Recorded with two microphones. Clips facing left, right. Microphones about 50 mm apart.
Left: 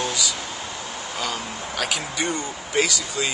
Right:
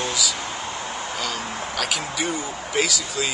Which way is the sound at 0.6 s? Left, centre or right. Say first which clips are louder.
Right 3 dB; right.